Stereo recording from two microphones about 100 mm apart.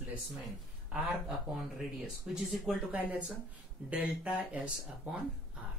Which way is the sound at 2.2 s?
5° right (ahead or behind).